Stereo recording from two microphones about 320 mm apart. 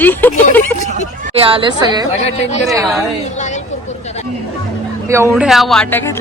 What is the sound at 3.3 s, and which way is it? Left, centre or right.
Vehicle, left.